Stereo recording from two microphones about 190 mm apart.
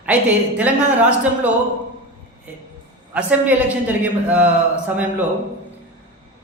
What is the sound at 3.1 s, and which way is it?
A man's voice, 5° right (ahead or behind).